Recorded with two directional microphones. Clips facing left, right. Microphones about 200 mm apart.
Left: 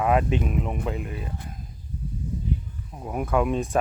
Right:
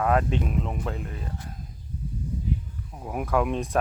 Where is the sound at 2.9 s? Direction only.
Centre (ahead or behind).